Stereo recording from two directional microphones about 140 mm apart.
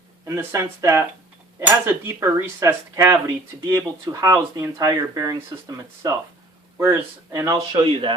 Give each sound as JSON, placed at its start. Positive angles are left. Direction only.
{"t": 0.3, "sound": "speech", "side_deg": -20}